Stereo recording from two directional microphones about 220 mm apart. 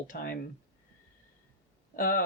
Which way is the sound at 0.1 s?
45° left (ahead or behind).